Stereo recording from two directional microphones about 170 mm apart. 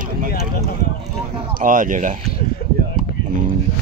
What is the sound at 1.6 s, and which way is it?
Speech, 50° right (ahead or behind).